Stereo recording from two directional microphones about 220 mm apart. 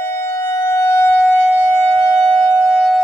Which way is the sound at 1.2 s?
Centre (ahead or behind).